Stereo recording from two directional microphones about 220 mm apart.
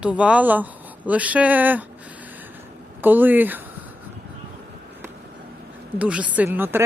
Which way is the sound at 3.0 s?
10° right (ahead or behind).